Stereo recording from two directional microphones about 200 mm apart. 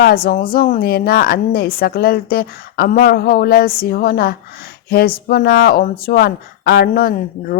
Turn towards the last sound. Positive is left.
turn(degrees=50)  # may be behind; listen again after turning